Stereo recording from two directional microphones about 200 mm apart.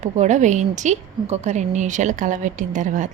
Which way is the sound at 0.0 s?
35° right (ahead or behind).